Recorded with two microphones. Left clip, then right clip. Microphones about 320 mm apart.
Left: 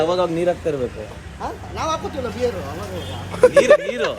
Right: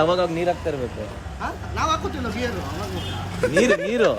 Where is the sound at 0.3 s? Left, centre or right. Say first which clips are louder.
Left 3 dB; centre.